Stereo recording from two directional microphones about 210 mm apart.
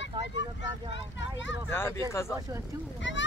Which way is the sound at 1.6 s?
10° left (ahead or behind).